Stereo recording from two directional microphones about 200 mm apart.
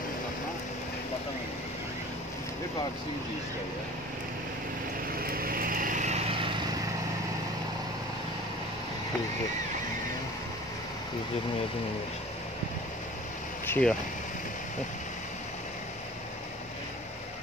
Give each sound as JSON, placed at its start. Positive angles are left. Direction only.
{"t": 5.2, "sound": "vehicle", "side_deg": -45}
{"t": 13.7, "sound": "speech", "side_deg": 5}